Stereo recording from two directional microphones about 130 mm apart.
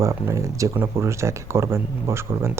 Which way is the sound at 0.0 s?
25° right (ahead or behind).